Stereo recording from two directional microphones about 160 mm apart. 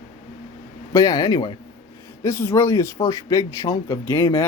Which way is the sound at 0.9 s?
20° left (ahead or behind).